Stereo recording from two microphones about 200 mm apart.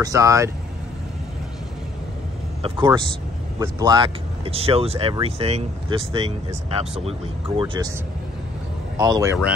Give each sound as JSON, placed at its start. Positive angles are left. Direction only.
{"t": 0.0, "sound": "speech", "side_deg": -15}
{"t": 2.6, "sound": "speech", "side_deg": -20}
{"t": 8.9, "sound": "speech", "side_deg": -20}